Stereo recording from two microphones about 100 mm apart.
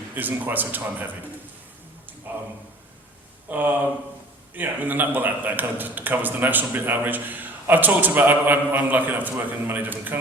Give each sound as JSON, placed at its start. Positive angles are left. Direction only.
{"t": 0.1, "sound": "speech", "side_deg": -20}
{"t": 3.5, "sound": "a man's voice", "side_deg": -15}